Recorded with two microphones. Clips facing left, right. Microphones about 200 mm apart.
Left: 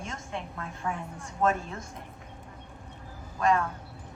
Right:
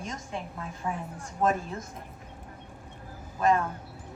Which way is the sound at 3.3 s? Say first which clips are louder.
Right 1 dB; 15° right (ahead or behind).